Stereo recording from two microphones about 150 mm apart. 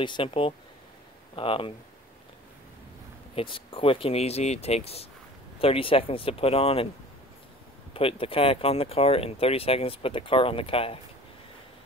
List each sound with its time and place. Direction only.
0.0 s speech: 35° left (ahead or behind)
3.3 s speech: 35° left (ahead or behind)
7.9 s speech: 35° left (ahead or behind)